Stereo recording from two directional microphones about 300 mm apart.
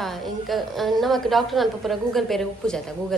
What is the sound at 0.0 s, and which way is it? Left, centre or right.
A woman's voice, centre.